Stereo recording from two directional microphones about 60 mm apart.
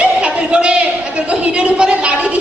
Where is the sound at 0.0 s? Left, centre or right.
Centre.